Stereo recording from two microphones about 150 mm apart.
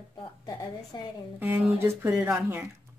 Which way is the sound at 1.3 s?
10° right (ahead or behind).